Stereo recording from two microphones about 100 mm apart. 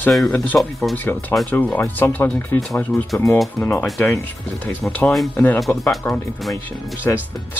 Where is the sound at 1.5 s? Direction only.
15° left (ahead or behind).